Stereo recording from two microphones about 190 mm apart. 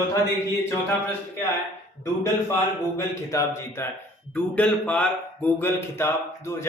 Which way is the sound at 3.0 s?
15° left (ahead or behind).